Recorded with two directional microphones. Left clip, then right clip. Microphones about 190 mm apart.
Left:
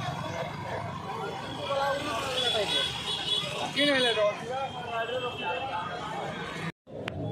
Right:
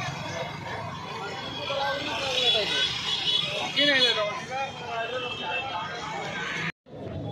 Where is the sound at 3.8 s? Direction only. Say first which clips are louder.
Right 3 dB; 50° left (ahead or behind).